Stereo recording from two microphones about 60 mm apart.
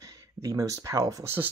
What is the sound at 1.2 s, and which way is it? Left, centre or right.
Speech, right.